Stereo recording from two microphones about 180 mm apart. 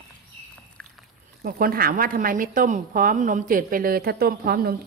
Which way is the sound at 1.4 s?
55° right (ahead or behind).